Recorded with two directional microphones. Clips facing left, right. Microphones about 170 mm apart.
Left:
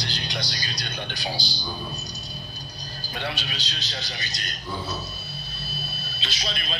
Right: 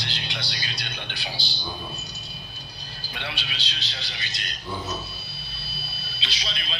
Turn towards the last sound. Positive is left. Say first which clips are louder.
# left 3 dB
turn(degrees=45)  # may be behind; listen again after turning